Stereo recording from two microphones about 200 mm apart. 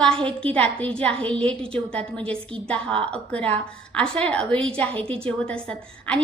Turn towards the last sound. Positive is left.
turn(degrees=5)  # may be behind; listen again after turning